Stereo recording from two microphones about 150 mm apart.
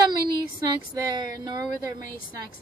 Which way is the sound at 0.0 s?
25° right (ahead or behind).